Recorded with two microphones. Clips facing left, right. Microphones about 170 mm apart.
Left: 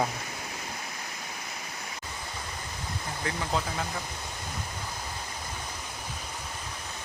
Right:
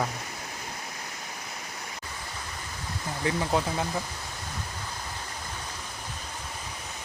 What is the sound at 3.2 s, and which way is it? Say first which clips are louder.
Speech: right 5 dB; 20° right (ahead or behind).